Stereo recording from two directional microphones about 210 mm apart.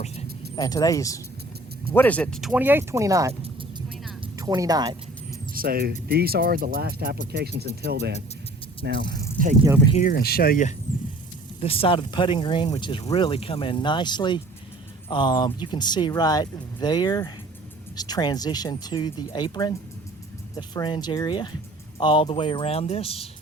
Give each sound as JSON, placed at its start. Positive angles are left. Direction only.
{"t": 0.5, "sound": "speech", "side_deg": 15}
{"t": 4.4, "sound": "speech", "side_deg": -15}
{"t": 5.5, "sound": "speech", "side_deg": -45}
{"t": 9.9, "sound": "speech", "side_deg": 40}
{"t": 11.6, "sound": "speech", "side_deg": 25}